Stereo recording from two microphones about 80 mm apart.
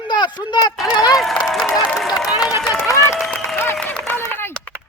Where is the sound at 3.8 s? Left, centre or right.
Centre.